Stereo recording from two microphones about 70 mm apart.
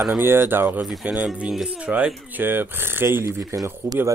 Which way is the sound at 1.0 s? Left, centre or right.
Centre.